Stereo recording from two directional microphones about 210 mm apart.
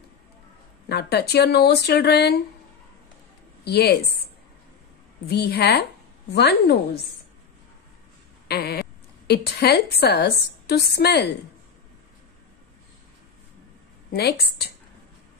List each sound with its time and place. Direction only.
0.8 s a woman's voice: 50° left (ahead or behind)
3.6 s a woman's voice: 50° left (ahead or behind)
5.2 s a woman's voice: 50° left (ahead or behind)
8.5 s a sound: 50° left (ahead or behind)
9.3 s a woman's voice: 50° left (ahead or behind)
14.1 s a woman's voice: 50° left (ahead or behind)